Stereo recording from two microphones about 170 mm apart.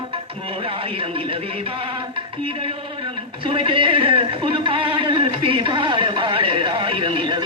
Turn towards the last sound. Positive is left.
turn(degrees=-30)  # may be behind; listen again after turning